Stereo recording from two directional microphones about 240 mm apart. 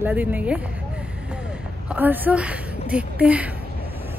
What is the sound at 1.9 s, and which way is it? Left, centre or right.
A woman's voice, centre.